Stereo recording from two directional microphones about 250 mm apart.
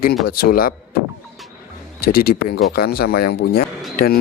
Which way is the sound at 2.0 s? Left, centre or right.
Left.